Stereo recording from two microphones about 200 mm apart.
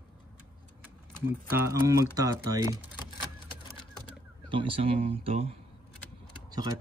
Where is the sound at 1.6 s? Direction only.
15° right (ahead or behind).